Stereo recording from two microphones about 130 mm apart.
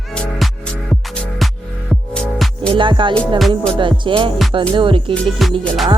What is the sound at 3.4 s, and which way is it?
Music, centre (ahead or behind).